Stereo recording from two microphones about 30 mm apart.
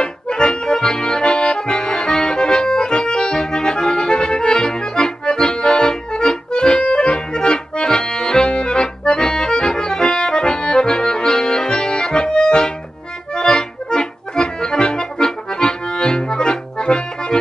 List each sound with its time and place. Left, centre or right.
0.0 s accordion: left